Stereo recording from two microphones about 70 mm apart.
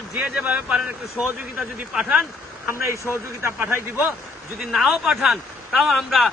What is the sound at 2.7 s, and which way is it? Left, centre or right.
Speech, right.